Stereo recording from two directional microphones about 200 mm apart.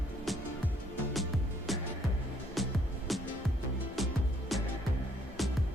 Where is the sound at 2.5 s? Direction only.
Centre (ahead or behind).